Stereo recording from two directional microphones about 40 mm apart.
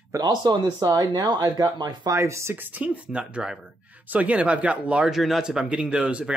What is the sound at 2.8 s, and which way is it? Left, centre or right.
Speech, right.